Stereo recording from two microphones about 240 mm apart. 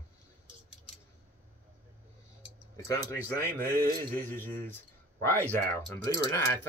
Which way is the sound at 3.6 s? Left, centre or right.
Right.